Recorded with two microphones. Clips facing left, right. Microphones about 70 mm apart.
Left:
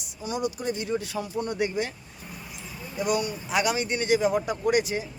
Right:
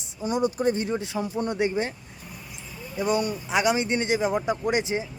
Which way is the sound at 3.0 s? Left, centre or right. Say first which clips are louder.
Right 2 dB; right.